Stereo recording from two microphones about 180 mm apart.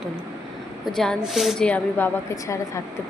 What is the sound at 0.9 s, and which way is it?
A woman's voice, centre (ahead or behind).